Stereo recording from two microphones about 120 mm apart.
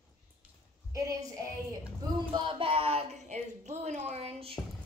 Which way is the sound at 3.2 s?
75° right (ahead or behind).